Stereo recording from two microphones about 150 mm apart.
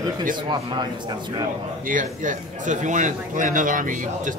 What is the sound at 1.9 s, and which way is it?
A man's voice, 60° right (ahead or behind).